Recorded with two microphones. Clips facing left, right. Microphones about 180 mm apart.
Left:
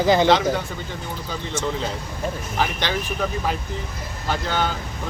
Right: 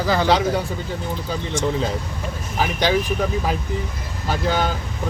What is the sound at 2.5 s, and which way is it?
Speech, 10° right (ahead or behind).